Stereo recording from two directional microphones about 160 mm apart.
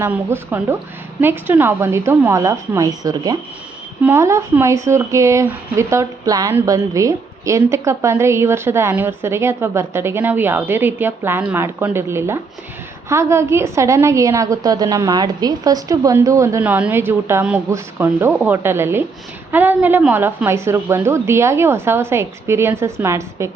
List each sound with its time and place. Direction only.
0.0 s speech: 15° right (ahead or behind)